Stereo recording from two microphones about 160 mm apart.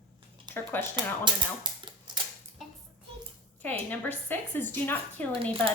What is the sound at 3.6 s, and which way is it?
Speech, 10° left (ahead or behind).